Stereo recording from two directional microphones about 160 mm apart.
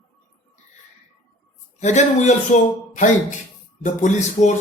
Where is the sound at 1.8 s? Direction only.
45° left (ahead or behind).